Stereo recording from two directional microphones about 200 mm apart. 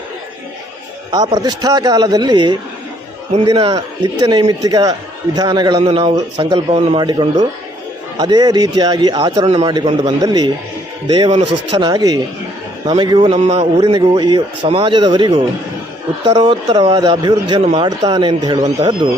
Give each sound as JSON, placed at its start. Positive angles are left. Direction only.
{"t": 1.1, "sound": "a man's voice", "side_deg": -20}